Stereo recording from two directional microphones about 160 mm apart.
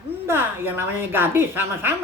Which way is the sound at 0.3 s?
15° right (ahead or behind).